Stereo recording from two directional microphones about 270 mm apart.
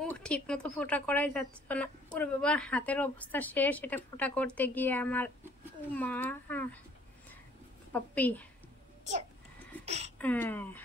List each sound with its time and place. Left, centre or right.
0.0 s a woman's voice: centre
7.9 s a woman's voice: centre
9.8 s a sound: right
10.1 s speech: centre